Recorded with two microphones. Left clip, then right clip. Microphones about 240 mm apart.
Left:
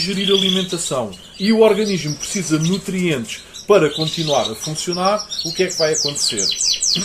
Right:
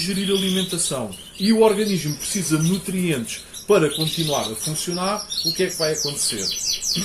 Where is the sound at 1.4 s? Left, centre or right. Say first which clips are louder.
Left 3 dB; centre.